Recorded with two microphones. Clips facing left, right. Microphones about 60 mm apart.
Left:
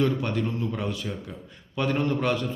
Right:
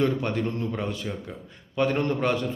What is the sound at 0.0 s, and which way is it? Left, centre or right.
A man's voice, right.